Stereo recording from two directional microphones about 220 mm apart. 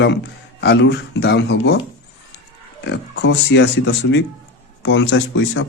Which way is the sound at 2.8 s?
50° left (ahead or behind).